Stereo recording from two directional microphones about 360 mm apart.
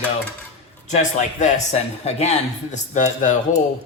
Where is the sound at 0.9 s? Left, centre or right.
Centre.